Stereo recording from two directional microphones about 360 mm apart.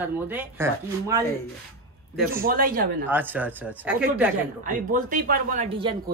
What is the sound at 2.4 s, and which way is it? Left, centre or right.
Speech, right.